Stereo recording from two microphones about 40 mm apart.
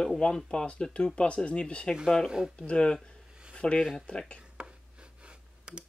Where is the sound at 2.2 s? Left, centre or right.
Centre.